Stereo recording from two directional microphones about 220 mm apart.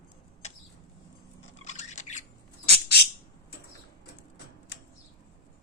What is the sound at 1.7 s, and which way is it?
Squawk, 30° left (ahead or behind).